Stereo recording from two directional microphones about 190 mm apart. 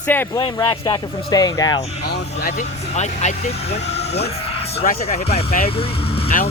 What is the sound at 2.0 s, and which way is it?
Speech, 55° left (ahead or behind).